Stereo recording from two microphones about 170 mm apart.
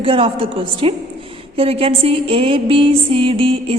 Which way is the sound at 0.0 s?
35° right (ahead or behind).